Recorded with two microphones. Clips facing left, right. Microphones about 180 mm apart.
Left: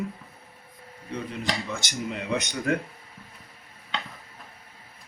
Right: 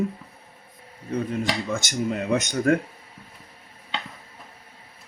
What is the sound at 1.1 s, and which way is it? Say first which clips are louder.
Speech: right 5 dB; 45° right (ahead or behind).